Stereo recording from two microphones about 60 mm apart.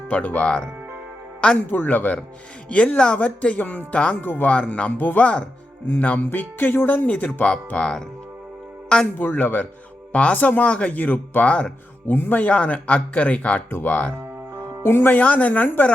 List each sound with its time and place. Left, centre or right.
0.1 s speech: left
1.7 s speech: left
2.6 s speech: centre
4.2 s speech: left
4.5 s speech: centre
4.9 s speech: left
9.1 s speech: left
12.0 s speech: left
12.4 s speech: left
13.7 s speech: left
14.8 s speech: left
15.1 s speech: left